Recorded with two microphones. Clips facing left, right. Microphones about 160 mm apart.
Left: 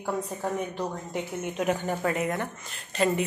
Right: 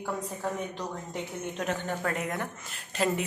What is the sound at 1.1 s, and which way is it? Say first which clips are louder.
A woman's voice: left 3 dB; 10° left (ahead or behind).